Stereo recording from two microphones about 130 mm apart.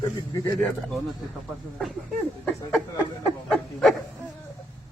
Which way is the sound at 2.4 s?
5° left (ahead or behind).